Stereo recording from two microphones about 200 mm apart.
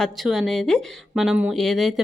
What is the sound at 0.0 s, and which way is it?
A woman's voice, centre (ahead or behind).